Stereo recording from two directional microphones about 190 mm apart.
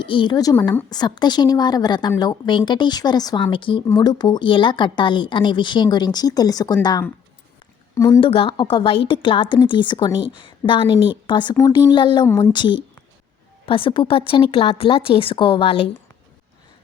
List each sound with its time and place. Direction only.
0.0 s a woman's voice: 25° left (ahead or behind)
8.2 s a woman's voice: 30° left (ahead or behind)